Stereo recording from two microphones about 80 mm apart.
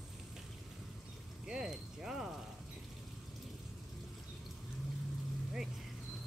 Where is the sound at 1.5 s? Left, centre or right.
Centre.